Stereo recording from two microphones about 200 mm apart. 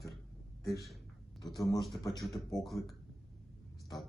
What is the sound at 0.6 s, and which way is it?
Speech, 15° left (ahead or behind).